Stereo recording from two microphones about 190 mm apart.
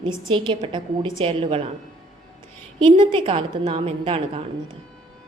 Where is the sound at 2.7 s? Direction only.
25° right (ahead or behind).